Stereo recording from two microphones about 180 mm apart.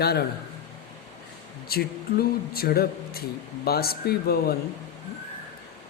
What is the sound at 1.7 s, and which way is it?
Speech, 60° left (ahead or behind).